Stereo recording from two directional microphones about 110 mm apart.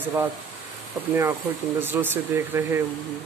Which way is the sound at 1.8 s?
20° right (ahead or behind).